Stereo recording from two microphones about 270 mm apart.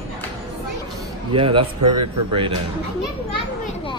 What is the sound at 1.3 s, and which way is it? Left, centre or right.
Speech, centre.